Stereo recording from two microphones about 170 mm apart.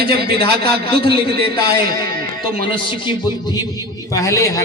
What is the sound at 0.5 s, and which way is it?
A man's voice, 70° right (ahead or behind).